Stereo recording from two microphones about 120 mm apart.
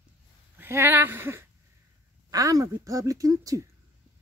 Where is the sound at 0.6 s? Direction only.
20° right (ahead or behind).